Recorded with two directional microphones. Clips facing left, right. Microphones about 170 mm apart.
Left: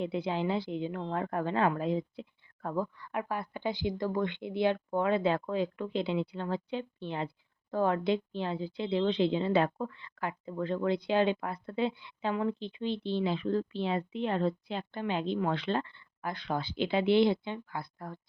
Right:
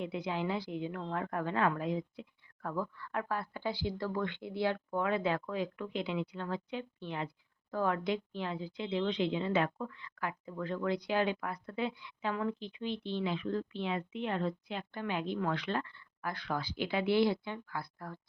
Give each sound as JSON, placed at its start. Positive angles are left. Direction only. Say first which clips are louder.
{"t": 0.0, "sound": "a woman's voice", "louder": "left 4 dB", "side_deg": 30}